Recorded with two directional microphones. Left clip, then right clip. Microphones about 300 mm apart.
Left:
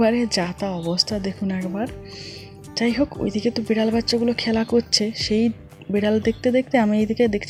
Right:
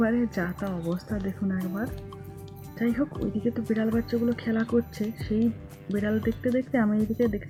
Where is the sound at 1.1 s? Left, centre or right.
Centre.